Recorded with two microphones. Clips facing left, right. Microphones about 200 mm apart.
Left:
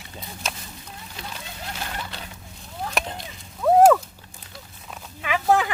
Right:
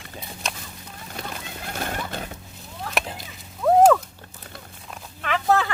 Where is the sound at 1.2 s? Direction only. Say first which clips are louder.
Right 4 dB; 50° right (ahead or behind).